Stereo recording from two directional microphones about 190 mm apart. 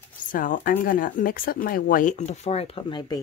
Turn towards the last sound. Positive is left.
turn(degrees=25)  # may be behind; listen again after turning